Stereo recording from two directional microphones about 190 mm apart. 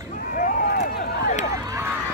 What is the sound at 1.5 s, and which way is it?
Run, 15° right (ahead or behind).